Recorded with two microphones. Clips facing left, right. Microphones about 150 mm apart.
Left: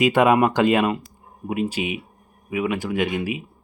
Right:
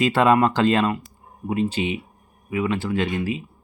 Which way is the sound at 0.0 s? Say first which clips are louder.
Left 1 dB; 15° left (ahead or behind).